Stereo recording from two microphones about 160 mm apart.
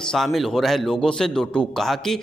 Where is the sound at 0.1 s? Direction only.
Centre (ahead or behind).